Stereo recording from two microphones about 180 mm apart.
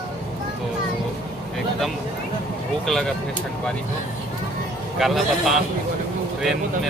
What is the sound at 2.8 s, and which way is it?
Speech, centre (ahead or behind).